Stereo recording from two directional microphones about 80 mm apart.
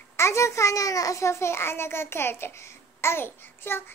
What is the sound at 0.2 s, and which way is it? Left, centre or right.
A child's voice, left.